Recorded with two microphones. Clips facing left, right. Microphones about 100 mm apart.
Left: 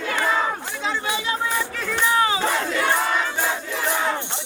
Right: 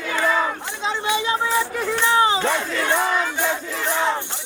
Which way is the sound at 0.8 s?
20° right (ahead or behind).